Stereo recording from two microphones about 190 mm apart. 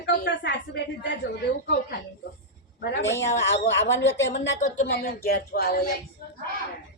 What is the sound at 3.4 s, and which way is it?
Speech, 70° left (ahead or behind).